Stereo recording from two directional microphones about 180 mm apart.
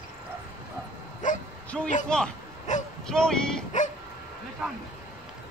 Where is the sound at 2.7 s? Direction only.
40° left (ahead or behind).